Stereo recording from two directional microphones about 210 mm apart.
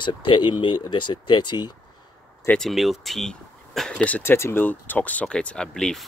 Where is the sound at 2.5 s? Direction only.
Centre (ahead or behind).